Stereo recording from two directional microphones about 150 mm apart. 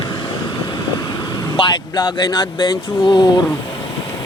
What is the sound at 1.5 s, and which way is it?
Speech, 30° left (ahead or behind).